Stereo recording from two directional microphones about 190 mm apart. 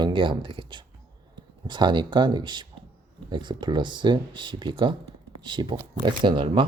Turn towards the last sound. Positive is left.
turn(degrees=-25)  # may be behind; listen again after turning